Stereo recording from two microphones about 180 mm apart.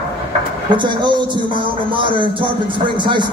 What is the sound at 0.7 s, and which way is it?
Speech, 25° right (ahead or behind).